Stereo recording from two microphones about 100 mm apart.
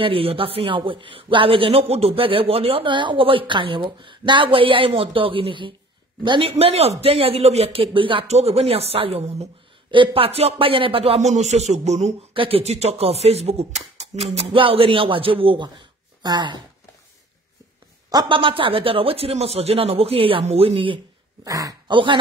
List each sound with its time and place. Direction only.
0.0 s a man's voice: 65° right (ahead or behind)
6.5 s speech: 90° right
9.8 s speech: 60° right (ahead or behind)
16.2 s speech: 50° right (ahead or behind)
18.3 s speech: 60° right (ahead or behind)
21.5 s speech: 35° right (ahead or behind)
21.8 s a man's voice: 55° right (ahead or behind)